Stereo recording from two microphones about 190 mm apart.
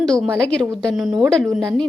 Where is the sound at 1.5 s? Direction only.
15° right (ahead or behind).